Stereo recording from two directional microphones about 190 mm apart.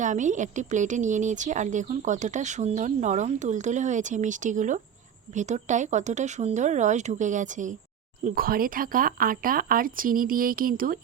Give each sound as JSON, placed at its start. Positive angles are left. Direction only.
{"t": 0.0, "sound": "speech", "side_deg": -40}